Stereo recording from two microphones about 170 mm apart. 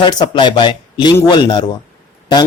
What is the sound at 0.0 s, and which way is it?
Speech, 25° left (ahead or behind).